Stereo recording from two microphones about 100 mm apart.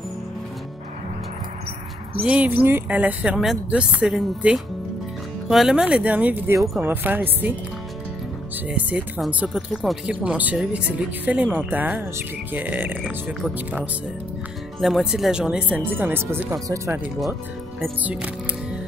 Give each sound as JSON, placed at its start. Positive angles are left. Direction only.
{"t": 2.2, "sound": "speech", "side_deg": -15}
{"t": 8.6, "sound": "speech", "side_deg": -15}
{"t": 14.8, "sound": "speech", "side_deg": 0}
{"t": 16.5, "sound": "speech", "side_deg": -35}
{"t": 18.0, "sound": "speech", "side_deg": -15}